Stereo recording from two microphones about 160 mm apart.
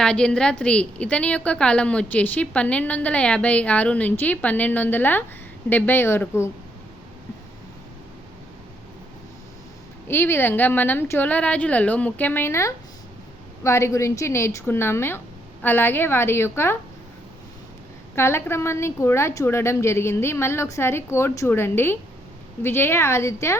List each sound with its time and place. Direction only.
0.0 s a woman's voice: 5° left (ahead or behind)
10.1 s a woman's voice: 15° left (ahead or behind)
18.1 s a woman's voice: 15° left (ahead or behind)